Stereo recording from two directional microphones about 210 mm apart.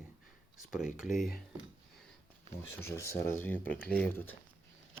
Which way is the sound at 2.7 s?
10° left (ahead or behind).